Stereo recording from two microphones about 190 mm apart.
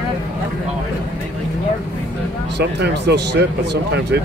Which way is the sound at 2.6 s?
60° right (ahead or behind).